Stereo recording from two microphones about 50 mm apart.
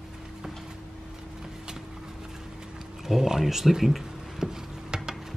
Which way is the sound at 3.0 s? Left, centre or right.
Centre.